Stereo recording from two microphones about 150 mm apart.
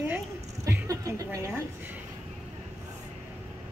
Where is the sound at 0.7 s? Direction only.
20° right (ahead or behind).